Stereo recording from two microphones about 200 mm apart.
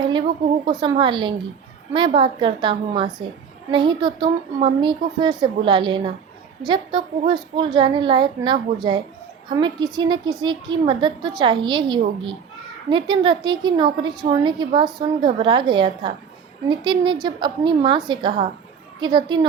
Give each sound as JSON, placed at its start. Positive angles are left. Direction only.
{"t": 0.6, "sound": "a woman's voice", "side_deg": -20}